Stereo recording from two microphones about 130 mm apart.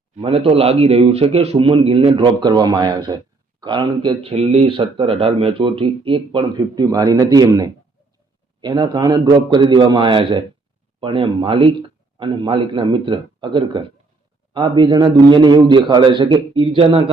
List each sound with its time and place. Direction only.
0.2 s speech: 45° right (ahead or behind)